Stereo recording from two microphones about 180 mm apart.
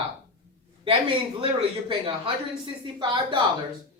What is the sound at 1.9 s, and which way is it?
Speech, 30° right (ahead or behind).